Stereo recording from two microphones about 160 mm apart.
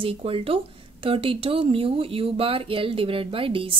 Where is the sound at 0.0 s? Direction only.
35° right (ahead or behind).